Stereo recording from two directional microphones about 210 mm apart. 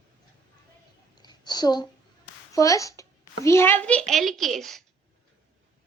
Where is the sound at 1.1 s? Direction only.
20° left (ahead or behind).